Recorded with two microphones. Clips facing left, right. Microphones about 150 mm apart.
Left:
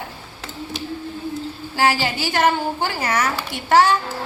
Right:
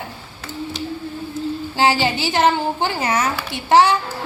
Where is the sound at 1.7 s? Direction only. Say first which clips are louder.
Right 1 dB; 25° right (ahead or behind).